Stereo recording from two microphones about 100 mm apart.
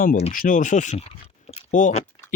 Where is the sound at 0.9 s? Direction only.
90° left.